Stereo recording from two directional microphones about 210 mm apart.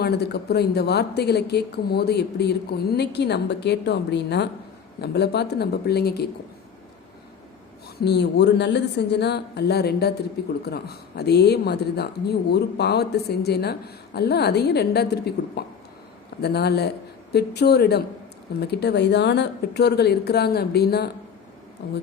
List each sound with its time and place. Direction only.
0.0 s speech: 50° left (ahead or behind)
8.0 s speech: 55° left (ahead or behind)